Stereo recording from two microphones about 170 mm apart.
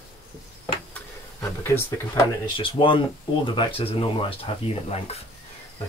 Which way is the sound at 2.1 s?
30° left (ahead or behind).